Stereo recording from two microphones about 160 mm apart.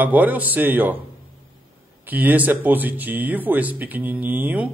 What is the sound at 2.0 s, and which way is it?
A man's voice, 10° right (ahead or behind).